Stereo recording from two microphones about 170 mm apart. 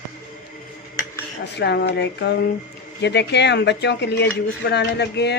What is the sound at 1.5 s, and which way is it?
Speech, 80° left.